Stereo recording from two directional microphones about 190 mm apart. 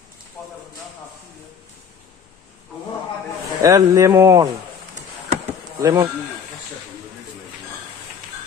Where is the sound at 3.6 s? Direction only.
15° right (ahead or behind).